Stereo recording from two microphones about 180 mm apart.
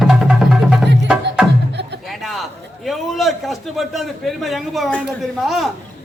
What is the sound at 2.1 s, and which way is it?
A man's voice, centre (ahead or behind).